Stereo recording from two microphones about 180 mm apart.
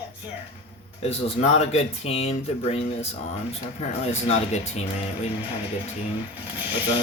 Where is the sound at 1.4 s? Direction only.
35° left (ahead or behind).